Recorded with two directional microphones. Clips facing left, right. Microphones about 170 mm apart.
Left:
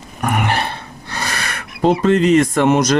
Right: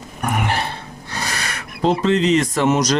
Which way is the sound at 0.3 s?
65° left (ahead or behind).